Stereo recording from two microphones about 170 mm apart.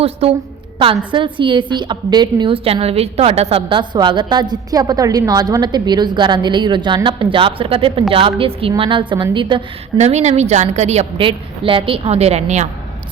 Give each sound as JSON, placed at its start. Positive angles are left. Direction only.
{"t": 0.0, "sound": "a woman's voice", "side_deg": -35}
{"t": 10.0, "sound": "a woman's voice", "side_deg": -40}